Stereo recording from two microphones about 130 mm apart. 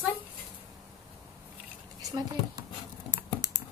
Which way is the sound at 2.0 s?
30° right (ahead or behind).